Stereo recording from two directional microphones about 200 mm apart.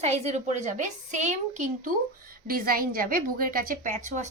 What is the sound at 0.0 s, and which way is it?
A woman's voice, 35° right (ahead or behind).